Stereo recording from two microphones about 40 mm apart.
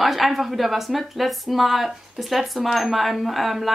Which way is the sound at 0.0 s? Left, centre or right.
Centre.